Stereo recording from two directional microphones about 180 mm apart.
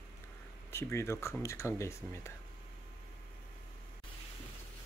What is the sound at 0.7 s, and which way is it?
Speech, 15° left (ahead or behind).